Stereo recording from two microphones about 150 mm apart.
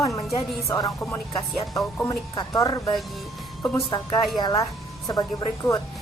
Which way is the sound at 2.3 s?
25° left (ahead or behind).